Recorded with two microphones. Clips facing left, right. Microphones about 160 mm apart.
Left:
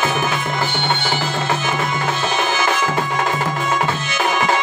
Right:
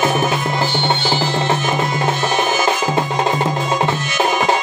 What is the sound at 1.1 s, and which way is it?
Music, 30° right (ahead or behind).